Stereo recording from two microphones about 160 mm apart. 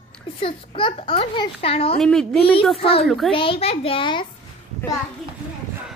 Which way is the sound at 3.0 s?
Centre (ahead or behind).